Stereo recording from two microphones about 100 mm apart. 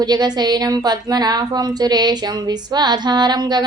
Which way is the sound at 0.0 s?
45° right (ahead or behind).